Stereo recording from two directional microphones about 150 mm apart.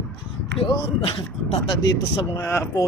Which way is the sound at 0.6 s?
40° left (ahead or behind).